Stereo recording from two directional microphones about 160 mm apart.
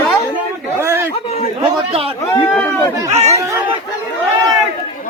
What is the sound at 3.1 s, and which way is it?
Speech, 45° right (ahead or behind).